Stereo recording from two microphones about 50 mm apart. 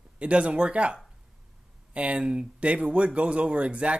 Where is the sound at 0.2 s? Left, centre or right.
Right.